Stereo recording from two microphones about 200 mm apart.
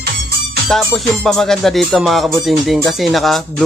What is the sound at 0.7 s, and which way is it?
Speech, centre (ahead or behind).